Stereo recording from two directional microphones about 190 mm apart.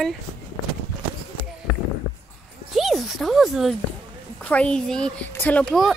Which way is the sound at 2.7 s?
Centre (ahead or behind).